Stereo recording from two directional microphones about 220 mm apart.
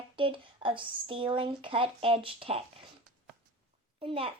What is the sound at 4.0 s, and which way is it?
Speech, 25° right (ahead or behind).